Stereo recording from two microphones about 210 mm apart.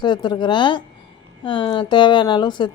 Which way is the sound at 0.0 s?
20° left (ahead or behind).